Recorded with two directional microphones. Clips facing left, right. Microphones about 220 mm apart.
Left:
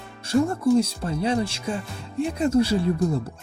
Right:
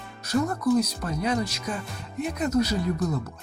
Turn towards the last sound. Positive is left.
turn(degrees=30)  # may be behind; listen again after turning